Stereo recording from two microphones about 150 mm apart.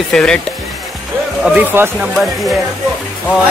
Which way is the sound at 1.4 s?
10° right (ahead or behind).